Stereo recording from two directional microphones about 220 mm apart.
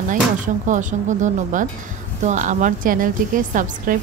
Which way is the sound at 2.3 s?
35° right (ahead or behind).